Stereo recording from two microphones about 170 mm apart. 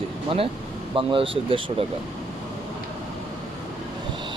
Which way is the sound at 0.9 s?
30° right (ahead or behind).